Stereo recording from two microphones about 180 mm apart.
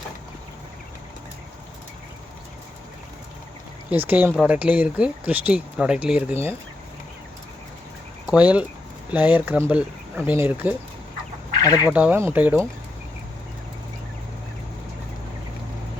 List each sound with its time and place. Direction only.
3.8 s speech: 10° right (ahead or behind)
8.3 s speech: 5° right (ahead or behind)
11.6 s speech: 20° left (ahead or behind)
11.9 s speech: 10° right (ahead or behind)